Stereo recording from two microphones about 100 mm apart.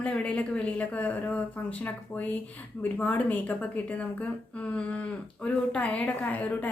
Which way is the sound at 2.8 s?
15° left (ahead or behind).